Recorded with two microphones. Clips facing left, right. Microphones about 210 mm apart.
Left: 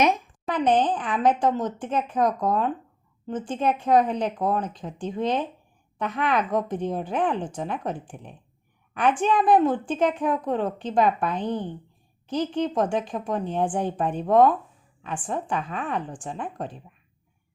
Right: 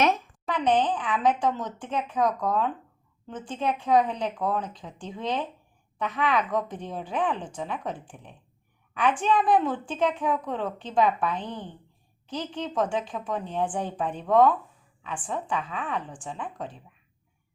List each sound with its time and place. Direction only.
0.6 s a woman's voice: 45° left (ahead or behind)